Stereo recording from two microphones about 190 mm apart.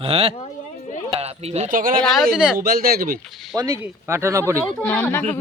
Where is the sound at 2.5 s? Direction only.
50° right (ahead or behind).